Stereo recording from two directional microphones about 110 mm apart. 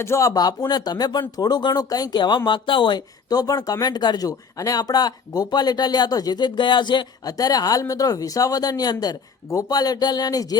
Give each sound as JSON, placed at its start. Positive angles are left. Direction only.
{"t": 0.0, "sound": "speech", "side_deg": 25}